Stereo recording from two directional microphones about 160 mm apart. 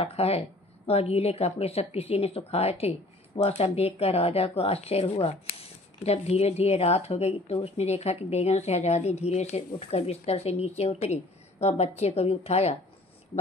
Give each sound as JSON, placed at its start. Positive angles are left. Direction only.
{"t": 0.0, "sound": "speech", "side_deg": 40}